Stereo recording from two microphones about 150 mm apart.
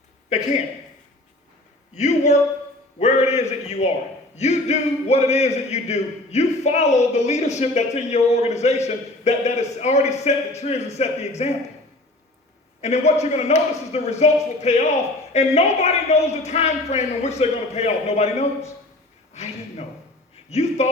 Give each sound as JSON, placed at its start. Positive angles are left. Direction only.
{"t": 2.0, "sound": "a man's voice", "side_deg": 50}
{"t": 12.8, "sound": "a man's voice", "side_deg": 45}
{"t": 19.3, "sound": "a sound", "side_deg": 45}
{"t": 20.5, "sound": "a man's voice", "side_deg": 45}